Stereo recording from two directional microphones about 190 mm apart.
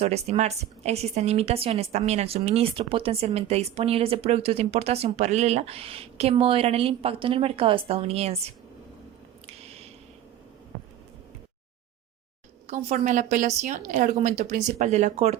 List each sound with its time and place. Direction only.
0.0 s a woman's voice: 35° right (ahead or behind)
9.5 s squish: 35° right (ahead or behind)
12.6 s a woman's voice: 35° right (ahead or behind)